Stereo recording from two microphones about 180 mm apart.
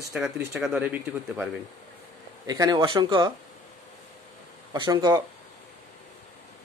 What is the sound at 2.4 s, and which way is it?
Speech, 20° right (ahead or behind).